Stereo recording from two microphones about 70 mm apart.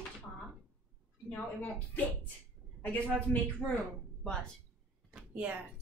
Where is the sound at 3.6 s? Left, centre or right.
Centre.